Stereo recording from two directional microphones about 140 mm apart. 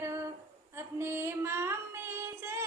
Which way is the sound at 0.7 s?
15° right (ahead or behind).